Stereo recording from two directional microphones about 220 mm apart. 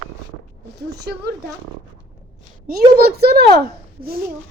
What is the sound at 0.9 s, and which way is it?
Speech, 50° right (ahead or behind).